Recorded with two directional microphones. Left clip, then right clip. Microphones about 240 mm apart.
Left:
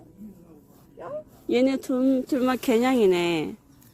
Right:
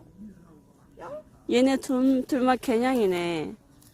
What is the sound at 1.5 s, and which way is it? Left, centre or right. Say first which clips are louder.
Speech: even; right.